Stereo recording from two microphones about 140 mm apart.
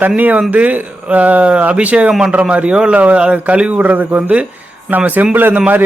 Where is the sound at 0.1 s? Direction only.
10° right (ahead or behind).